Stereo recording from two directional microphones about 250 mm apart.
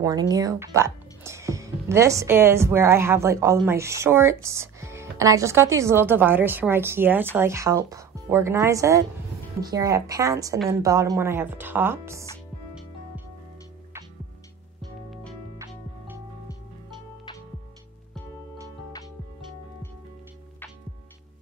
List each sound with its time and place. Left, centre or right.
0.0 s speech: centre
15.5 s music: centre